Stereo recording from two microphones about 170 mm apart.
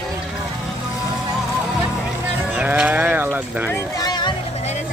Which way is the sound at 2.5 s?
5° right (ahead or behind).